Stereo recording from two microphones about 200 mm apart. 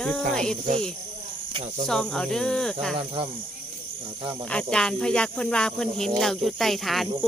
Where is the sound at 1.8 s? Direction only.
5° left (ahead or behind).